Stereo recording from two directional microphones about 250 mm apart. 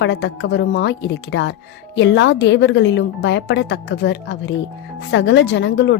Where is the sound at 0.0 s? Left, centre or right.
Left.